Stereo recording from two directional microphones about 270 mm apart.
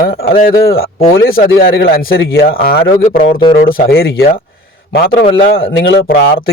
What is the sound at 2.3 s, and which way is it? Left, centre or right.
Speech, left.